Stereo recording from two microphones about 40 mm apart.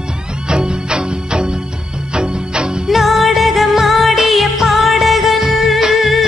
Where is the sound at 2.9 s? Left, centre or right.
Centre.